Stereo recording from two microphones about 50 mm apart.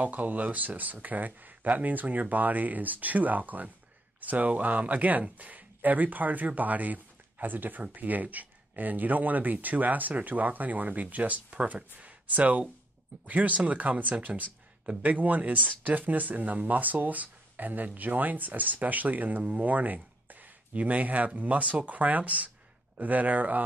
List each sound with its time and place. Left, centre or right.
0.0 s speech: right